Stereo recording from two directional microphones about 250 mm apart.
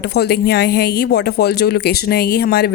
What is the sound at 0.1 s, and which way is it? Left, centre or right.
Speech, left.